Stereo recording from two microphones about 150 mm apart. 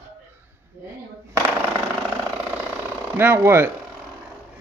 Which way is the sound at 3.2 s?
15° right (ahead or behind).